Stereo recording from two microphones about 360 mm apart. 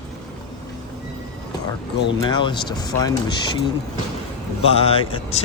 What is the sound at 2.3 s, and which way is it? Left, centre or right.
Speech, centre.